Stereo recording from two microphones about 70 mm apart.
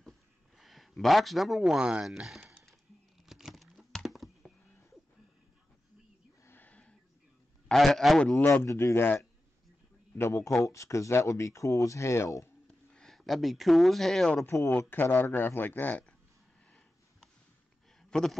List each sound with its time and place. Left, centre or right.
0.6 s speech: centre
1.6 s speech: centre
2.2 s a sound: centre
3.3 s computer keyboard: centre
6.6 s a sound: centre
7.6 s a man's voice: centre
8.4 s speech: left
8.6 s speech: left
10.1 s speech: left
12.9 s speech: centre
14.4 s speech: left
14.7 s speech: left
18.1 s a man's voice: centre